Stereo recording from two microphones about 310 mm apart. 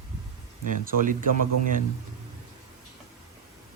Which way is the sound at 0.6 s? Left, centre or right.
Right.